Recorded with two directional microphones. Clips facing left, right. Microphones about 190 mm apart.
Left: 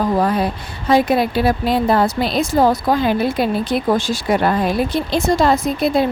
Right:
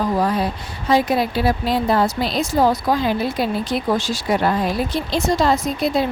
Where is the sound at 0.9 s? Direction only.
55° left (ahead or behind).